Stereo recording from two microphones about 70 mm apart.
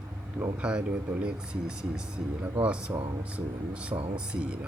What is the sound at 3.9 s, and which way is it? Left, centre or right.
Speech, right.